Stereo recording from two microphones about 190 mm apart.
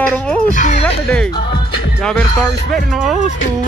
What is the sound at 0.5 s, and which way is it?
Speech, 40° left (ahead or behind).